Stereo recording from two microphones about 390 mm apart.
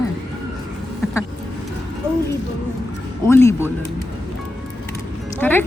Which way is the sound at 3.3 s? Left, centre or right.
Centre.